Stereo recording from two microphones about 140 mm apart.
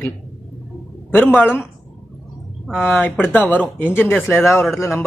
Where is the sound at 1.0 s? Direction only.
15° left (ahead or behind).